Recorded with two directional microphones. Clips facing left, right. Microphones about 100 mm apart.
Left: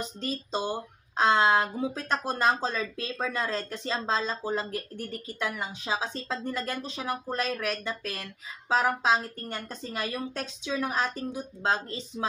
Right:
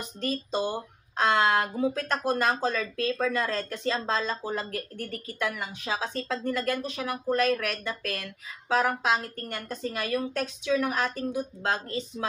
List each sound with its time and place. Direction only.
0.2 s speech: 25° left (ahead or behind)